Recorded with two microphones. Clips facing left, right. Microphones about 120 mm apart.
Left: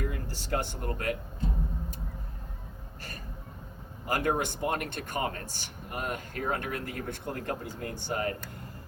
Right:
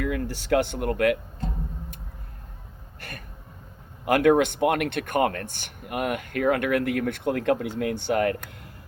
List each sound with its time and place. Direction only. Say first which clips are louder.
0.0 s speech: right 8 dB; 80° right
3.0 s speech: right 3 dB; 65° right (ahead or behind)